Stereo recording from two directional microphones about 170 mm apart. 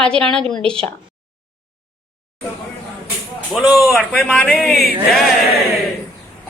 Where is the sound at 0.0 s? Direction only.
5° left (ahead or behind).